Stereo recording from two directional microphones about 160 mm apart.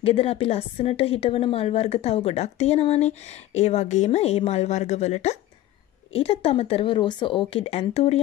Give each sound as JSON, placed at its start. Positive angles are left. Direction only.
{"t": 0.0, "sound": "a woman's voice", "side_deg": 40}